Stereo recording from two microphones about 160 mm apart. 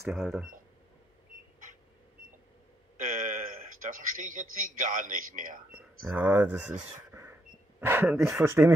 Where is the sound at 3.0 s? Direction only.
55° right (ahead or behind).